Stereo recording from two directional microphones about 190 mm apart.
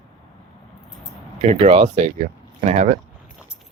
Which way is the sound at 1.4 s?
35° right (ahead or behind).